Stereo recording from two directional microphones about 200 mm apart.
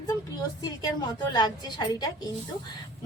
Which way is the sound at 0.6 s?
20° left (ahead or behind).